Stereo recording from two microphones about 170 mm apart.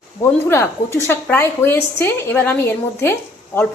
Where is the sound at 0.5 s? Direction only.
15° left (ahead or behind).